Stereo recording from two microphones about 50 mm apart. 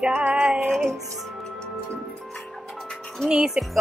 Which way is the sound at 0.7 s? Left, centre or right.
Centre.